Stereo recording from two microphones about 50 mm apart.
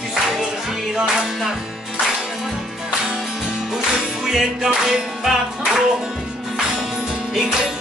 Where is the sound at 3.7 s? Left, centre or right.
Centre.